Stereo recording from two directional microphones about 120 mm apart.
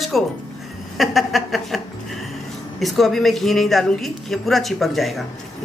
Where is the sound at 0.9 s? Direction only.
Centre (ahead or behind).